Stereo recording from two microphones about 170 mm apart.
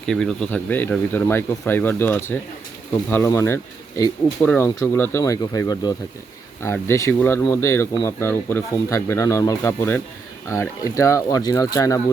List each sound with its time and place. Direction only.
0.0 s speech: 5° left (ahead or behind); by 11.9 s 20° left (ahead or behind)